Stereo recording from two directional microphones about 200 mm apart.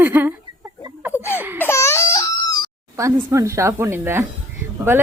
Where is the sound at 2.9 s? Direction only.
15° right (ahead or behind).